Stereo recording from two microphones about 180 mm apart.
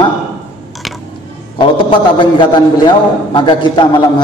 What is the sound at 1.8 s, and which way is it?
A man's voice, 25° left (ahead or behind).